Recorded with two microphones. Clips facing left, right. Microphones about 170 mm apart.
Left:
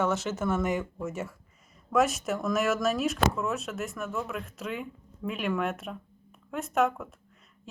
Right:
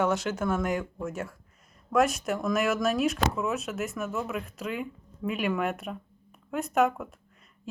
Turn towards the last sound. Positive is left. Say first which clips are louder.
# right 2 dB
turn(degrees=0)  # may be behind; listen again after turning